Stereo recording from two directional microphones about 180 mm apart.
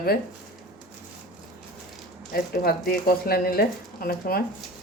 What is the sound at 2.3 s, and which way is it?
Speech, 55° left (ahead or behind).